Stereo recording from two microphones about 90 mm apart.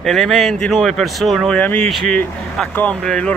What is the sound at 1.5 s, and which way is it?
Speech, 15° left (ahead or behind).